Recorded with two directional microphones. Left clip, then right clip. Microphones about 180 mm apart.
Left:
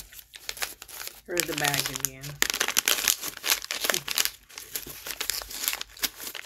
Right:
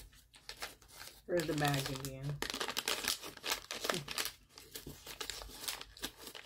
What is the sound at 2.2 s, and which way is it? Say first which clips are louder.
Crumpling: left 14 dB; 10° left (ahead or behind).